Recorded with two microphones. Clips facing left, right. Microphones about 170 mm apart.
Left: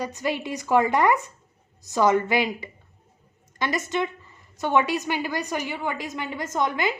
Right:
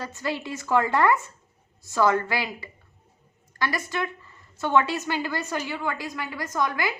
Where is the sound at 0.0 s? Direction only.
15° left (ahead or behind).